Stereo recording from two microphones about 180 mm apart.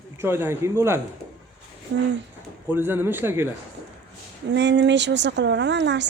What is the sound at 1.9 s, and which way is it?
Speech, 70° right (ahead or behind).